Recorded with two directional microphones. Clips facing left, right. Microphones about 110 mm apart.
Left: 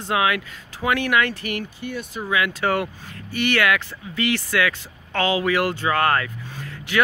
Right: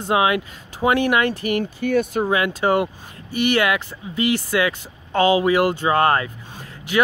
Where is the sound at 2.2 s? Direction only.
35° right (ahead or behind).